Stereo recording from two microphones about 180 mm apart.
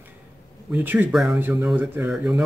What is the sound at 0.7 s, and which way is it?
Speech, 10° right (ahead or behind).